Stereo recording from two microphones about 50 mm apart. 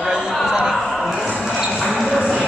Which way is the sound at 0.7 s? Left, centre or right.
Centre.